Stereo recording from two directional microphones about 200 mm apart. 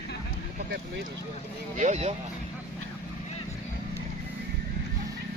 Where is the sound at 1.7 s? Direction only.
35° right (ahead or behind).